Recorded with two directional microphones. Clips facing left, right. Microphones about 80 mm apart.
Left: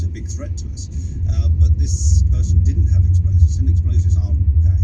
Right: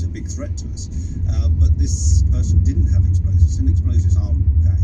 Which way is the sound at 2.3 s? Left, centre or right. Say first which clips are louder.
Right 1 dB; right.